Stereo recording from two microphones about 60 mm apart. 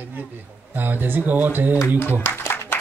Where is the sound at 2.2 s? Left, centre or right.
Left.